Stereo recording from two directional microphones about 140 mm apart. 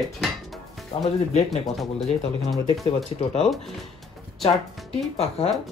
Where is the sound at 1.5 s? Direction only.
Centre (ahead or behind).